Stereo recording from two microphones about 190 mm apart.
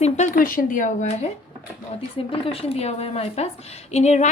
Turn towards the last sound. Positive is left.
turn(degrees=35)  # may be behind; listen again after turning